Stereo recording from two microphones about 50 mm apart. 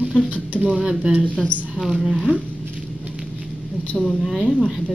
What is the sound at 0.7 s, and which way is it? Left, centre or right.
Speech, centre.